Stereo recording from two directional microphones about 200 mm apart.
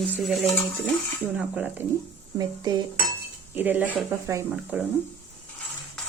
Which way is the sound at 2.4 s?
20° right (ahead or behind).